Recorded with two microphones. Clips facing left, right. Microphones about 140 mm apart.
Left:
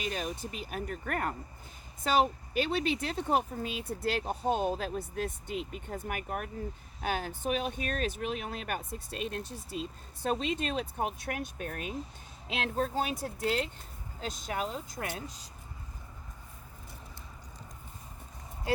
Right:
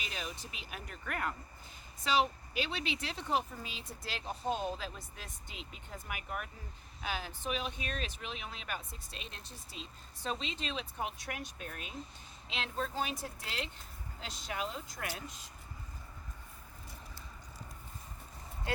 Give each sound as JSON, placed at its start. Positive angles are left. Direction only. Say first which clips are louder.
{"t": 0.0, "sound": "speech", "louder": "left 8 dB", "side_deg": 45}